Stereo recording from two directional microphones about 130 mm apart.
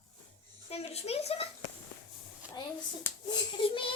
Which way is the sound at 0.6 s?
50° left (ahead or behind).